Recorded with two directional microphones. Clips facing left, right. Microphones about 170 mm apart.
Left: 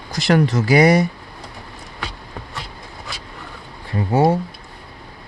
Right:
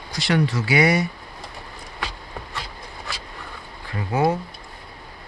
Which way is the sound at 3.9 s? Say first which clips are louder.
Left 5 dB; 25° left (ahead or behind).